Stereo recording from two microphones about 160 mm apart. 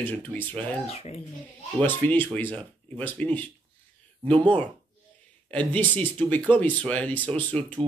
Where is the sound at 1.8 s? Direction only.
10° left (ahead or behind).